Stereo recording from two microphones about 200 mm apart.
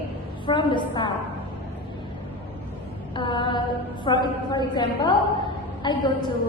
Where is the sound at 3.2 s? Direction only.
25° left (ahead or behind).